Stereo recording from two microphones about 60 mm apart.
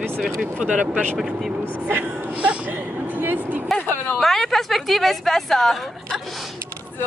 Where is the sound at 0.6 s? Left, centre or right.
Right.